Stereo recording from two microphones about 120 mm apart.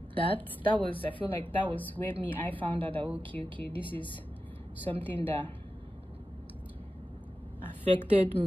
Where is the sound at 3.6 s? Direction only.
15° left (ahead or behind).